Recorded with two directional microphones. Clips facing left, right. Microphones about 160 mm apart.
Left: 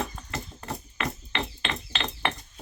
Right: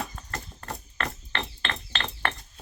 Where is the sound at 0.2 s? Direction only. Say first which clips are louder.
Left 2 dB; 10° left (ahead or behind).